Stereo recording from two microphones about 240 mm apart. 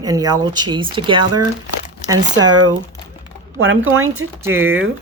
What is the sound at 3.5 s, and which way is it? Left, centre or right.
Speech, right.